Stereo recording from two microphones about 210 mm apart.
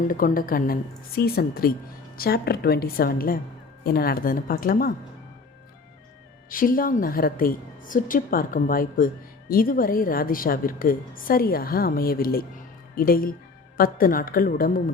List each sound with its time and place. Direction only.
0.1 s a woman's voice: 40° left (ahead or behind)
6.5 s a woman's voice: 40° left (ahead or behind)